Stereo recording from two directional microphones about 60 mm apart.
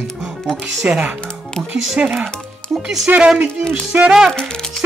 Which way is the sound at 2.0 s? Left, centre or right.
Right.